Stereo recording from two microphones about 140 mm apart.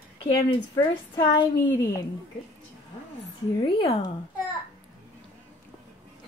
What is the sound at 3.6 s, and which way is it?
Speech, 40° left (ahead or behind).